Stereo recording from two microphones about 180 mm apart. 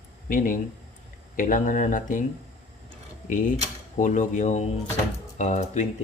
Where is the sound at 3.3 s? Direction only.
45° left (ahead or behind).